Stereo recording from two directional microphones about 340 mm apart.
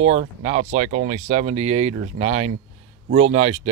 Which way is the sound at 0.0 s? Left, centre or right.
Centre.